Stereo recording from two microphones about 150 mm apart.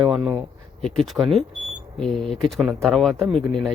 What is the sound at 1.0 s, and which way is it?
Speech, centre (ahead or behind).